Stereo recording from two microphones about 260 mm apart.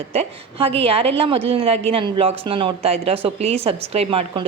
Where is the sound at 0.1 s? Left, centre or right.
Right.